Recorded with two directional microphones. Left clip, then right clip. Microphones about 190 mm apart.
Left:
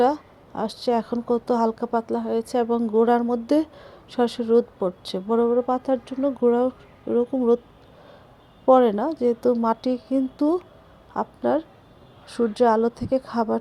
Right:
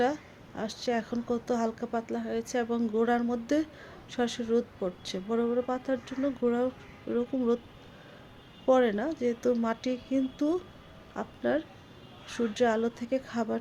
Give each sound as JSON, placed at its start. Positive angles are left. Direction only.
{"t": 0.0, "sound": "speech", "side_deg": 30}
{"t": 8.6, "sound": "speech", "side_deg": 30}